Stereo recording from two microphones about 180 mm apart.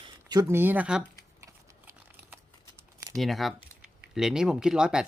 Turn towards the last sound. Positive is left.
turn(degrees=-5)  # may be behind; listen again after turning